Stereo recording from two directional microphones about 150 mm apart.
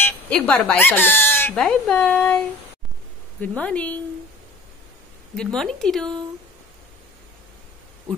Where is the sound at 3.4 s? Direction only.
10° left (ahead or behind).